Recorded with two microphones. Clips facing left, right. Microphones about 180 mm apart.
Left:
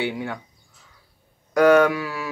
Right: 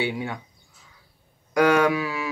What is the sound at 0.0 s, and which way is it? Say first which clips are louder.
Speech: left 1 dB; 15° right (ahead or behind).